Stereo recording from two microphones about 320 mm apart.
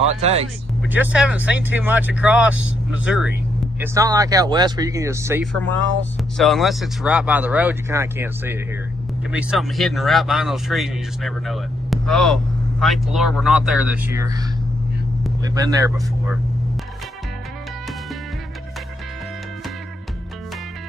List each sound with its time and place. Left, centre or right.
0.1 s speech: centre
0.9 s speech: centre
15.5 s speech: centre